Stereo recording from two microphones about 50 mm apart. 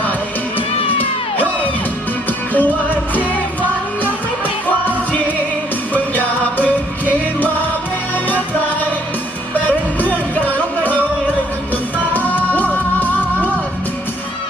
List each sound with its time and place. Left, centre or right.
2.5 s music: left
5.9 s music: left
9.6 s music: left
12.1 s music: left